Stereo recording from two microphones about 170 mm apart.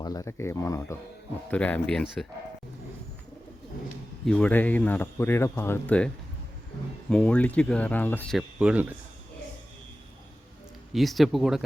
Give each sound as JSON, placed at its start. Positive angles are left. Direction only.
{"t": 0.0, "sound": "speech", "side_deg": 20}
{"t": 4.3, "sound": "speech", "side_deg": 10}
{"t": 7.1, "sound": "speech", "side_deg": 5}
{"t": 8.4, "sound": "speech", "side_deg": -5}
{"t": 10.9, "sound": "speech", "side_deg": 0}